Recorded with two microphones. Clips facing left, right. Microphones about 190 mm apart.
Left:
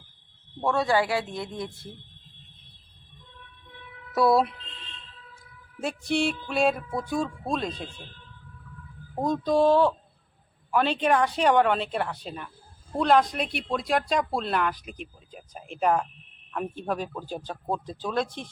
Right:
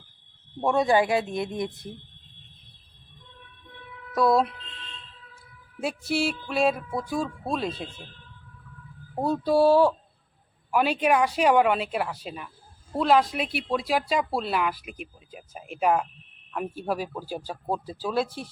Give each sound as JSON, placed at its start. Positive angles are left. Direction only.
{"t": 0.6, "sound": "speech", "side_deg": -15}
{"t": 4.1, "sound": "speech", "side_deg": 5}
{"t": 5.8, "sound": "speech", "side_deg": -5}
{"t": 9.1, "sound": "speech", "side_deg": -10}